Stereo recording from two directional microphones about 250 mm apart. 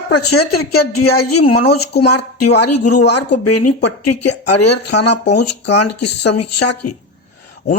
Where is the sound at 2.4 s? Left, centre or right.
Left.